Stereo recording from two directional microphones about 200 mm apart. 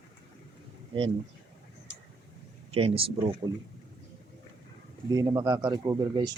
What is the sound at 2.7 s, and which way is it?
Speech, 30° right (ahead or behind).